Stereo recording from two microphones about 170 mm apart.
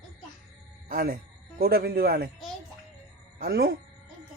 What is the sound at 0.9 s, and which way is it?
A man's voice, 60° right (ahead or behind).